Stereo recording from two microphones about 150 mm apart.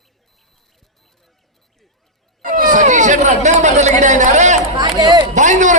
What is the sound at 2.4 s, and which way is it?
Speech, 65° right (ahead or behind).